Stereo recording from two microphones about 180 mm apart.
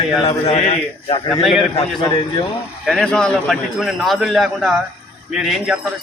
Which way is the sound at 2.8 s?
5° left (ahead or behind).